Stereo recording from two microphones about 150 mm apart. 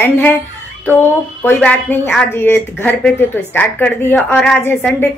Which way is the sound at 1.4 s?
10° left (ahead or behind).